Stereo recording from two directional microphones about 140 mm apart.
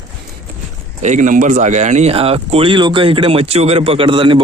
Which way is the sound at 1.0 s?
60° right (ahead or behind).